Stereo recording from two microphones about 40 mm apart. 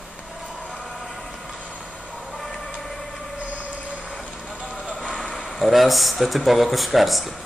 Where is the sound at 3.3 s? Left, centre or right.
Right.